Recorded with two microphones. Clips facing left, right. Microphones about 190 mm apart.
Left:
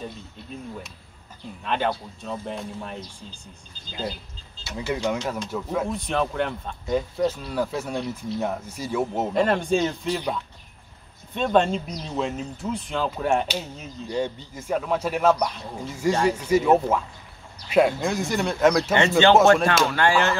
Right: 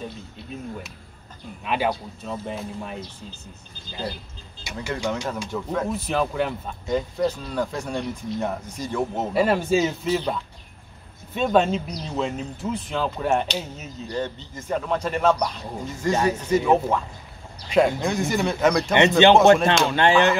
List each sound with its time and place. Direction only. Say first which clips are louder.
0.0 s speech: right 1 dB; centre (ahead or behind)
4.9 s speech: left 1 dB; 10° left (ahead or behind)
9.3 s speech: right 2 dB; 5° right (ahead or behind)
11.3 s speech: right 1 dB; 5° right (ahead or behind)
14.1 s speech: left 2 dB; 10° left (ahead or behind)
18.9 s a man's voice: right 4 dB; 20° right (ahead or behind)